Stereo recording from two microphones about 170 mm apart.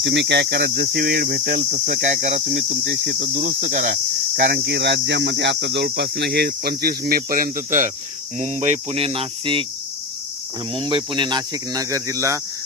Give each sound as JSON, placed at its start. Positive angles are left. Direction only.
{"t": 0.0, "sound": "speech", "side_deg": -90}
{"t": 2.5, "sound": "speech", "side_deg": -65}
{"t": 3.3, "sound": "speech", "side_deg": -60}
{"t": 4.4, "sound": "speech", "side_deg": -75}
{"t": 8.4, "sound": "cricket", "side_deg": -40}
{"t": 10.8, "sound": "speech", "side_deg": -30}